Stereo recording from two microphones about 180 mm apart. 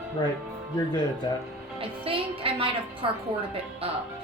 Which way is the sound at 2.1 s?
30° right (ahead or behind).